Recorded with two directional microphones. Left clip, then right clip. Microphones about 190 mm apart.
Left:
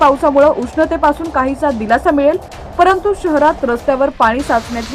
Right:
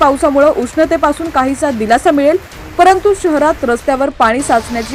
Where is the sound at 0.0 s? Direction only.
15° right (ahead or behind).